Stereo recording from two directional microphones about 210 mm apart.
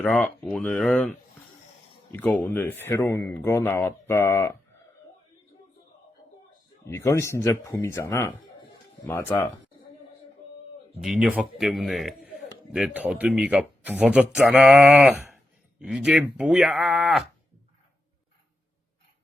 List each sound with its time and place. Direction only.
0.0 s a man's voice: 5° left (ahead or behind)
2.1 s speech: 10° left (ahead or behind)
6.8 s speech: 10° left (ahead or behind)
11.0 s a man's voice: 5° right (ahead or behind)